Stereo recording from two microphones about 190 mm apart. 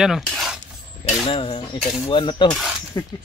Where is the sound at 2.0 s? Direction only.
25° left (ahead or behind).